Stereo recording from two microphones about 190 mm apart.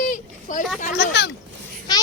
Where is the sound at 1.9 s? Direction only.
20° left (ahead or behind).